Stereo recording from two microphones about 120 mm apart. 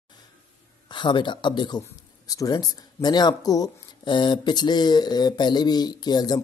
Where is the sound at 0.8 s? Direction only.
40° left (ahead or behind).